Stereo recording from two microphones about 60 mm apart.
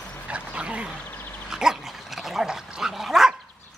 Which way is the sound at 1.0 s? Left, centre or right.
Left.